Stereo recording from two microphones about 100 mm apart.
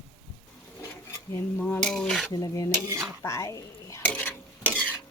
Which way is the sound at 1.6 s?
20° left (ahead or behind).